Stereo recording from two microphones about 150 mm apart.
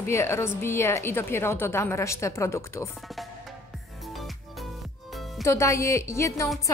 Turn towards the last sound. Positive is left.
turn(degrees=20)  # may be behind; listen again after turning